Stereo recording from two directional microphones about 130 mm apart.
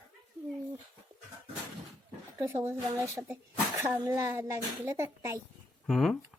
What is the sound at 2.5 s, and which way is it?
A woman's voice, 15° right (ahead or behind).